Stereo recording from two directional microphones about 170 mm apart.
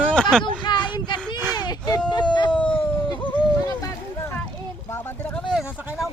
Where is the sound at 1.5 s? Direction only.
25° left (ahead or behind).